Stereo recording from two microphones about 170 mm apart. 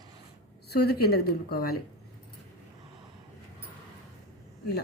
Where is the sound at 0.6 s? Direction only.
70° left (ahead or behind).